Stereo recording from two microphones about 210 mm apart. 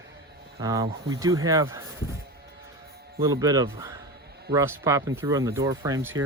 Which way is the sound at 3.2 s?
15° right (ahead or behind).